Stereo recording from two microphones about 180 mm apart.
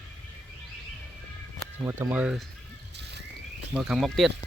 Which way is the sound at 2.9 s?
70° right (ahead or behind).